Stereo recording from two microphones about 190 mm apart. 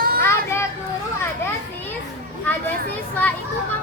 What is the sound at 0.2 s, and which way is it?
Children playing, 15° left (ahead or behind).